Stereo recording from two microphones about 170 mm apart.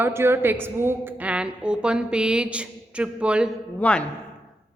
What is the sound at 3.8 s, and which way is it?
Speech, 10° left (ahead or behind).